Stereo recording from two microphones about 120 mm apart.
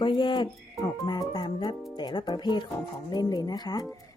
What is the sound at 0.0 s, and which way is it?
Speech, 40° left (ahead or behind).